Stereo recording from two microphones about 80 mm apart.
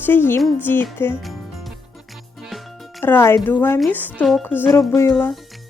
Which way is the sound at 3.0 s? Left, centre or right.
Left.